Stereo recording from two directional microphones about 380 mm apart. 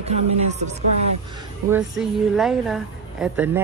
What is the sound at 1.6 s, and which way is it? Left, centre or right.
A woman's voice, centre.